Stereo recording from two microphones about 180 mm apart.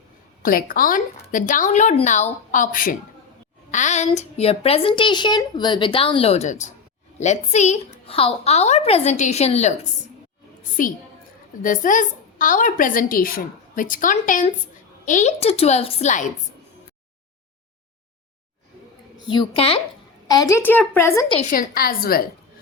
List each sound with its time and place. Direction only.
0.4 s a woman's voice: 50° left (ahead or behind)
10.6 s a woman's voice: 50° left (ahead or behind)
19.3 s a woman's voice: 30° left (ahead or behind)
20.2 s a woman's voice: 20° left (ahead or behind)
21.5 s a woman's voice: 55° left (ahead or behind)